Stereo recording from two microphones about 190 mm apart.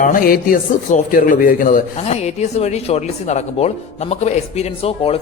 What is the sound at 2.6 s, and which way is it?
Speech, 35° left (ahead or behind).